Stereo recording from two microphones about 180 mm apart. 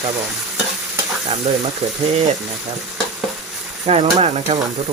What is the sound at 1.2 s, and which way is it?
Speech, 40° right (ahead or behind).